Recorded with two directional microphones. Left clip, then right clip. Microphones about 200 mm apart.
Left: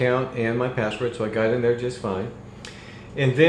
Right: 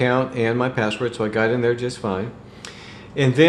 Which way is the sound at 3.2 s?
35° right (ahead or behind).